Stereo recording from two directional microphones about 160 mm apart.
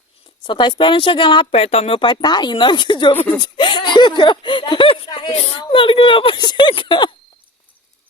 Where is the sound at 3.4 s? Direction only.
30° left (ahead or behind).